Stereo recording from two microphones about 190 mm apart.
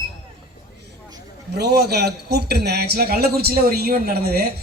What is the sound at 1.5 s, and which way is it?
A woman's voice, 55° right (ahead or behind).